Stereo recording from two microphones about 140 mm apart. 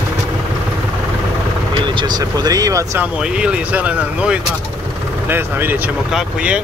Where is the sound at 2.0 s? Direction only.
30° right (ahead or behind).